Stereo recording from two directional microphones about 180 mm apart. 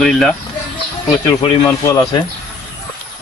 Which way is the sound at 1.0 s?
20° left (ahead or behind).